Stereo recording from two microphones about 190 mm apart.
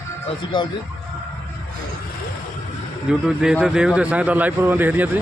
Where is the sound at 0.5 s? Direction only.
25° left (ahead or behind).